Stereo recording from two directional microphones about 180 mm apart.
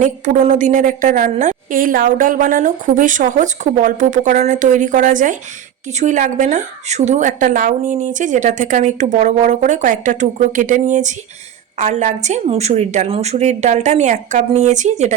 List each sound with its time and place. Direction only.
0.0 s a woman's voice: 40° right (ahead or behind)